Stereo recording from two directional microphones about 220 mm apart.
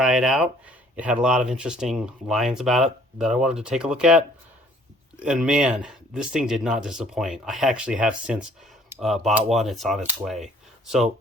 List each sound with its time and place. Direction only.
0.0 s speech: centre (ahead or behind)
5.2 s speech: 5° right (ahead or behind)